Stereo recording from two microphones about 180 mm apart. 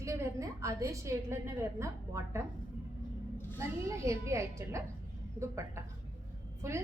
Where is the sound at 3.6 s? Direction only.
15° right (ahead or behind).